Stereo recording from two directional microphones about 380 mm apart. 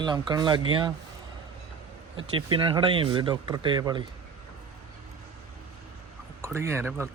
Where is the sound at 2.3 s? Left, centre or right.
Centre.